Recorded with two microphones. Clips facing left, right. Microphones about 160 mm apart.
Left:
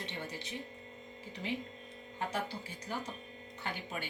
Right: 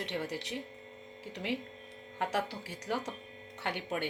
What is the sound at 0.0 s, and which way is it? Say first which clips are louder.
Speech: right 6 dB; 80° right.